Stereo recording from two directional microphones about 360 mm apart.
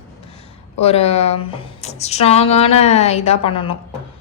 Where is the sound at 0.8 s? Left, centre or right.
Centre.